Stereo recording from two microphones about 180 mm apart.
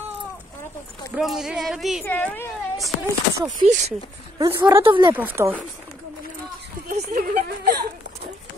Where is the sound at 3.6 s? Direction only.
40° right (ahead or behind).